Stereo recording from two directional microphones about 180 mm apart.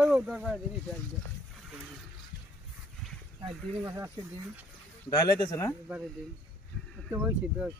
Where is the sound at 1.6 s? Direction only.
5° right (ahead or behind).